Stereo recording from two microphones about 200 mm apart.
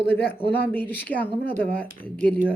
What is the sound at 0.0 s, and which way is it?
Speech, 55° left (ahead or behind).